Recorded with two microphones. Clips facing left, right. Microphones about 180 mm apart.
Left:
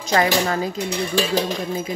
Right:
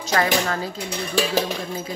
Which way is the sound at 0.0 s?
15° left (ahead or behind).